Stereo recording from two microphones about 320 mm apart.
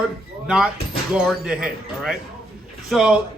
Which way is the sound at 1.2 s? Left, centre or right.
Centre.